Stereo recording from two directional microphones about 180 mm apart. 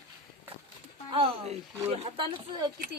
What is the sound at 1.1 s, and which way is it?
Speech, 35° right (ahead or behind).